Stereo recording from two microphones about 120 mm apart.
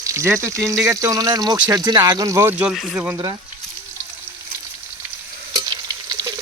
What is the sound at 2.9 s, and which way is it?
Speech, 15° right (ahead or behind).